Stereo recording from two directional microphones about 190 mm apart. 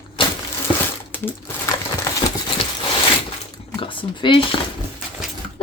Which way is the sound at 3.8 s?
25° left (ahead or behind).